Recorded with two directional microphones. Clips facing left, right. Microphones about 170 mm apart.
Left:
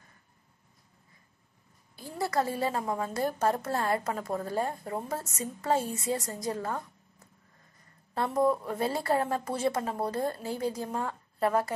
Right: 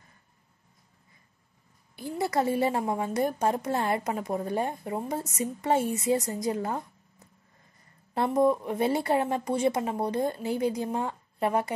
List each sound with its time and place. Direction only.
2.2 s a woman's voice: 20° right (ahead or behind)